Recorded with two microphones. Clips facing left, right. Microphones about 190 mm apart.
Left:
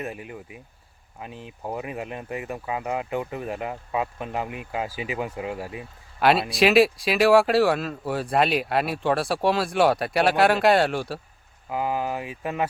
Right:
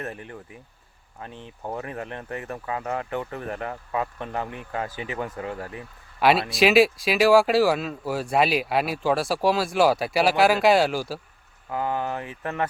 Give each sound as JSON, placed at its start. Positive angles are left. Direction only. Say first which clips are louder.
{"t": 0.0, "sound": "speech", "louder": "left 1 dB", "side_deg": 10}
{"t": 1.6, "sound": "speech", "louder": "left 1 dB", "side_deg": 15}
{"t": 6.1, "sound": "speech", "louder": "even", "side_deg": 0}
{"t": 11.7, "sound": "speech", "louder": "left 1 dB", "side_deg": 10}